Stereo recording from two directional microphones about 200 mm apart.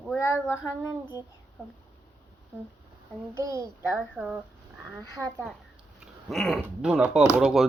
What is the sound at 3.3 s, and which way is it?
Speech, 15° right (ahead or behind).